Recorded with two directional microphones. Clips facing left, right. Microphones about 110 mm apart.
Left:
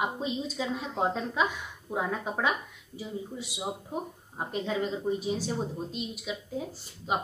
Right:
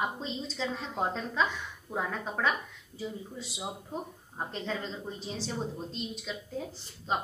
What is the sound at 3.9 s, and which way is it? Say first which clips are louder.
A woman's voice: left 3 dB; 10° left (ahead or behind).